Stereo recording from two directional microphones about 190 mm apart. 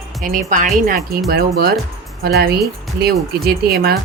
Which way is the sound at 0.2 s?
45° right (ahead or behind).